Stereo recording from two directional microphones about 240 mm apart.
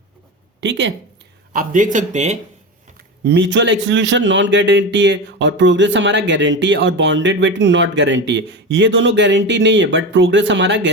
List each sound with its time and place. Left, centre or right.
0.6 s a man's voice: right
1.5 s speech: right
3.2 s a man's voice: right